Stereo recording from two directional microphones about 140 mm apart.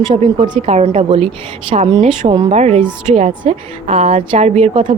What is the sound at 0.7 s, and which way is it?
A woman's voice, 50° right (ahead or behind).